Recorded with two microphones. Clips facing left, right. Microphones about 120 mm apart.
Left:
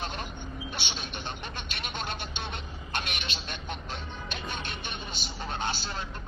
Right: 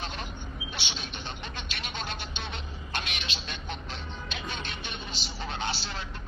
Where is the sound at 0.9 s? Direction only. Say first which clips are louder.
Left 1 dB; 50° left (ahead or behind).